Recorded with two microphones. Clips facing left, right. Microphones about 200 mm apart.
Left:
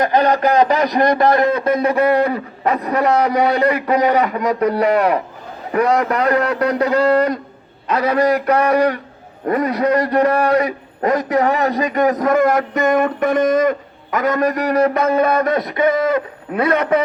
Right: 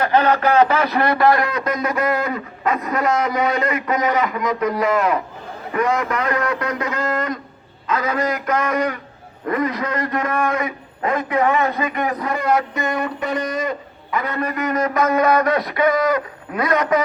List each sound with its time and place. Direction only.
0.0 s a man's voice: 15° left (ahead or behind); by 3.5 s 35° left (ahead or behind)
3.5 s a man's voice: 65° left (ahead or behind)
3.8 s a man's voice: 35° left (ahead or behind)